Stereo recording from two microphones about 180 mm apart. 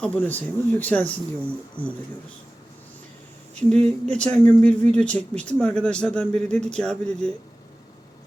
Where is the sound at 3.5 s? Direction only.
5° left (ahead or behind).